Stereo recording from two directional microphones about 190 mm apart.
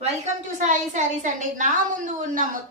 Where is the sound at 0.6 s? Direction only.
40° right (ahead or behind).